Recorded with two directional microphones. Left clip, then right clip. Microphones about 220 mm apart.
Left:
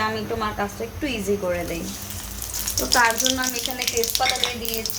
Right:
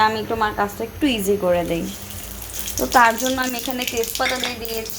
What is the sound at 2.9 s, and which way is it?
Speech, 20° right (ahead or behind).